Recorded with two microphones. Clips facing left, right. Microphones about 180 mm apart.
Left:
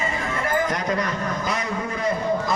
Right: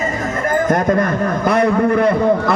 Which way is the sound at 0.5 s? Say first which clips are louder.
Right 10 dB; 50° right (ahead or behind).